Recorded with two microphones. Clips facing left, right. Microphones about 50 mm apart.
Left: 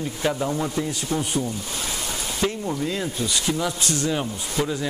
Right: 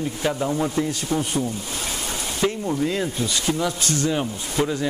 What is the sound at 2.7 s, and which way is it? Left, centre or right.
Speech, right.